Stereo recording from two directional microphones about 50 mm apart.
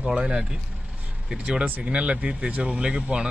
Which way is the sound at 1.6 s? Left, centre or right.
Right.